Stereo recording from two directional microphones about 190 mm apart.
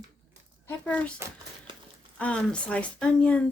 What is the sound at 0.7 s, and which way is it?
Speech, 5° left (ahead or behind).